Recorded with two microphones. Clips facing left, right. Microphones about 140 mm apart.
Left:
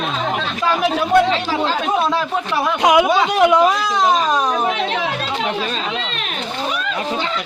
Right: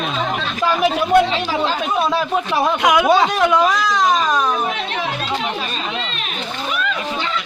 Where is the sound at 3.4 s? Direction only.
15° left (ahead or behind).